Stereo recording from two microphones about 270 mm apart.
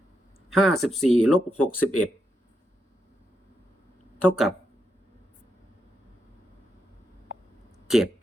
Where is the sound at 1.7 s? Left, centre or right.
Left.